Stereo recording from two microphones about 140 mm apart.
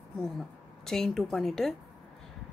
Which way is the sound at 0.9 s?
5° left (ahead or behind).